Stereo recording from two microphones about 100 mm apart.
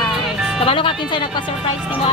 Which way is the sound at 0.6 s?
60° left (ahead or behind).